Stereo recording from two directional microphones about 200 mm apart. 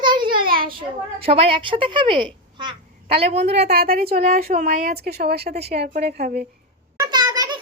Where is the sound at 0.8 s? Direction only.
25° right (ahead or behind).